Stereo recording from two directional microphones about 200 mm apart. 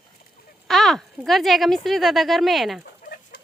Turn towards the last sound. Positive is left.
turn(degrees=45)  # may be behind; listen again after turning